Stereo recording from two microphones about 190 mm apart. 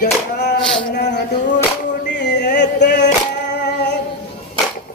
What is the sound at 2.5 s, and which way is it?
Music, 65° left (ahead or behind).